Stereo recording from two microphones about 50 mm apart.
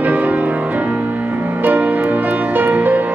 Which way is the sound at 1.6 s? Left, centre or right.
Right.